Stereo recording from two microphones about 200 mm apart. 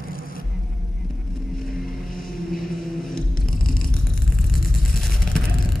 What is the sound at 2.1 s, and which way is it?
Vehicle, 45° left (ahead or behind).